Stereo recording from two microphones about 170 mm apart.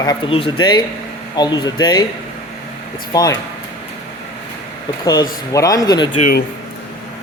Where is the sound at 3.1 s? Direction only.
20° left (ahead or behind).